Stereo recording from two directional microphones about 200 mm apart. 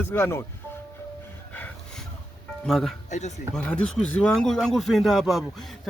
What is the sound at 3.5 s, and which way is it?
A man's voice, 5° left (ahead or behind).